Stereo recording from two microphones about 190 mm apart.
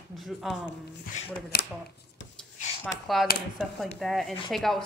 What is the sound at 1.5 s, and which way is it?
Speech, 55° left (ahead or behind).